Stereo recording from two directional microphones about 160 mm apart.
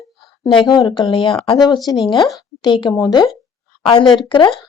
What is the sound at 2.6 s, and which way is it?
Speech, 30° left (ahead or behind).